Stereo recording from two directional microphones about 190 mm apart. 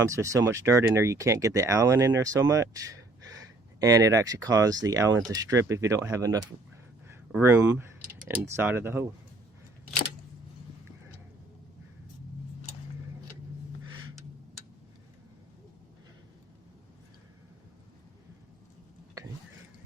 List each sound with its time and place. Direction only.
0.0 s speech: 15° right (ahead or behind)